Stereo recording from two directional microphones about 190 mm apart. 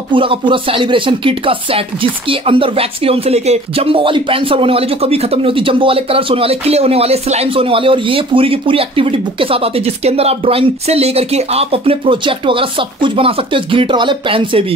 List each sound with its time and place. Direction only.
0.1 s speech: 25° right (ahead or behind)